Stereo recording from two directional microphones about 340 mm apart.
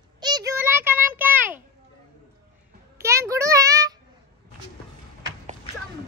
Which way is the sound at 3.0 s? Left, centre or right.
Centre.